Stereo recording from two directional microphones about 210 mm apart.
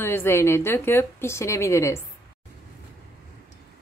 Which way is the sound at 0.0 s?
10° left (ahead or behind).